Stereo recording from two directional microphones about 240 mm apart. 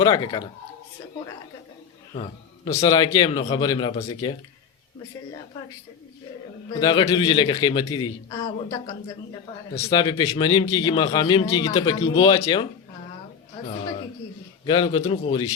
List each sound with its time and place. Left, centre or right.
0.0 s a man's voice: centre
2.7 s a man's voice: centre
6.7 s a man's voice: centre
14.6 s a man's voice: centre